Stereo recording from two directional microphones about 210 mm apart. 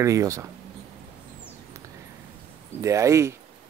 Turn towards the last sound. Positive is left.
turn(degrees=-15)  # may be behind; listen again after turning